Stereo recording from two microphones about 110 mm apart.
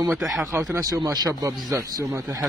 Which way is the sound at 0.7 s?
30° right (ahead or behind).